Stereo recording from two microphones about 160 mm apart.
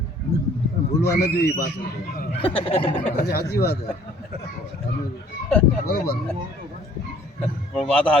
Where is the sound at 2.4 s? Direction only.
35° left (ahead or behind).